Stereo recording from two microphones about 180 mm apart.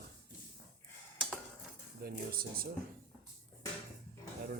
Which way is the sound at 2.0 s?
55° right (ahead or behind).